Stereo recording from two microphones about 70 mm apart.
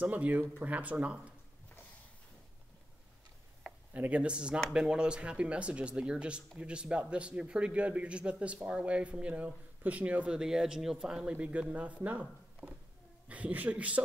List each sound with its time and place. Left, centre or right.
0.0 s speech: right
3.9 s a woman's voice: right